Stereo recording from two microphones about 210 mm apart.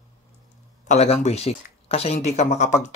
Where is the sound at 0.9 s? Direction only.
30° left (ahead or behind).